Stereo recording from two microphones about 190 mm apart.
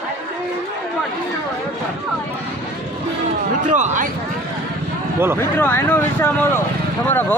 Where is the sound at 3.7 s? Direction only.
40° right (ahead or behind).